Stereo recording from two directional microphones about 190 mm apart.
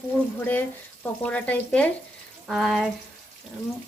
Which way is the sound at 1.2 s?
5° left (ahead or behind).